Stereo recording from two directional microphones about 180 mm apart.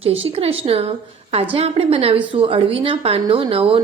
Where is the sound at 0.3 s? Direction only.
35° right (ahead or behind).